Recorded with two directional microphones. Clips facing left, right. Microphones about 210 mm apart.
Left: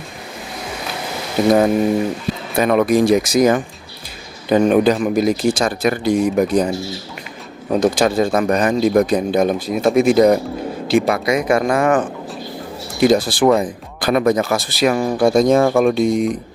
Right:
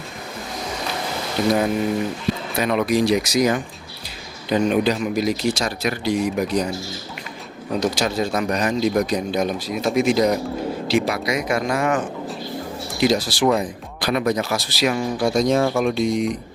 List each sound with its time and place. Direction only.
2.6 s speech: 50° left (ahead or behind)
7.7 s speech: 50° left (ahead or behind)